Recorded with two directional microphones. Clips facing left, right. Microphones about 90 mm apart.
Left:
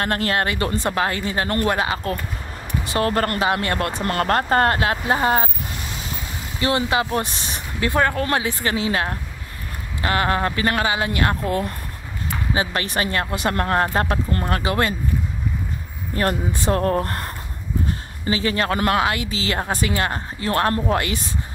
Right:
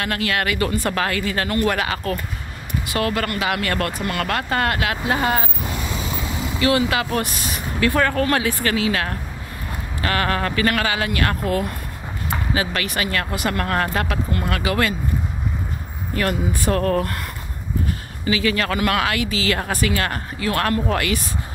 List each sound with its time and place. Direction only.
0.0 s speech: 35° left (ahead or behind)
4.0 s speech: 40° left (ahead or behind)
6.6 s speech: 25° left (ahead or behind)
16.5 s speech: 25° left (ahead or behind)